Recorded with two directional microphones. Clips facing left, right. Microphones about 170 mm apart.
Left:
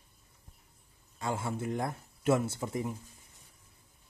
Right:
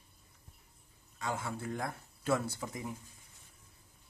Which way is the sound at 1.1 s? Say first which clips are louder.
Left 4 dB; 30° left (ahead or behind).